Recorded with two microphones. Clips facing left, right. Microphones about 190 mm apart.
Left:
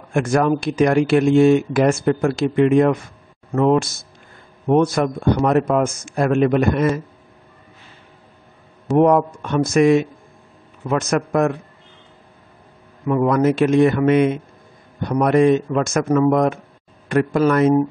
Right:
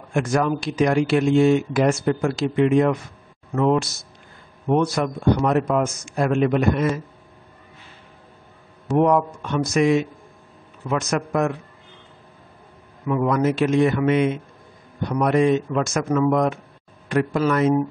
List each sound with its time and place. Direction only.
0.1 s speech: 50° left (ahead or behind)
8.9 s speech: 50° left (ahead or behind)
13.1 s speech: 50° left (ahead or behind)